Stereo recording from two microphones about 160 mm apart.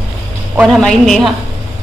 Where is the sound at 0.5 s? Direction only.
Centre (ahead or behind).